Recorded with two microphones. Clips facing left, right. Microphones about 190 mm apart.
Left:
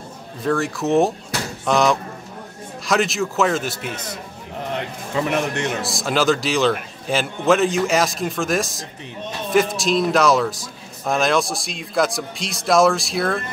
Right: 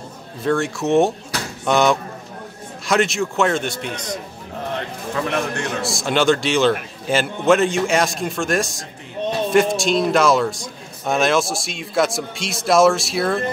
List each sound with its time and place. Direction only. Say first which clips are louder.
0.4 s a man's voice: right 1 dB; centre (ahead or behind)
5.1 s a man's voice: left 1 dB; 20° left (ahead or behind)
5.8 s a man's voice: right 4 dB; centre (ahead or behind)